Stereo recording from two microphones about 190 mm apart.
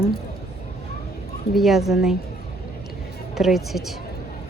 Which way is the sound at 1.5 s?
Centre (ahead or behind).